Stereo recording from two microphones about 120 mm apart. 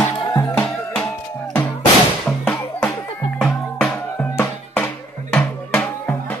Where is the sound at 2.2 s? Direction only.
5° left (ahead or behind).